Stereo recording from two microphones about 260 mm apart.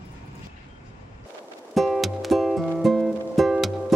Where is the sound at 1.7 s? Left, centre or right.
Centre.